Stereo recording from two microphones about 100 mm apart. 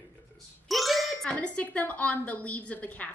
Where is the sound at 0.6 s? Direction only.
Centre (ahead or behind).